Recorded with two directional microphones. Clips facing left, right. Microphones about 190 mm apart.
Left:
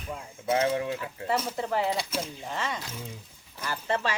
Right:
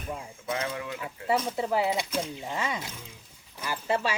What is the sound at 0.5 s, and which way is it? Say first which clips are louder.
Speech: left 7 dB; 30° left (ahead or behind).